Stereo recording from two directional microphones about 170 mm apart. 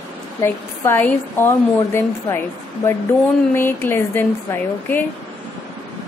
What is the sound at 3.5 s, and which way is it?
A woman's voice, 15° left (ahead or behind).